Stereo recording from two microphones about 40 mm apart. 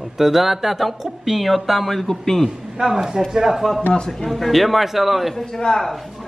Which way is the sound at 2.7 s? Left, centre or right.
Centre.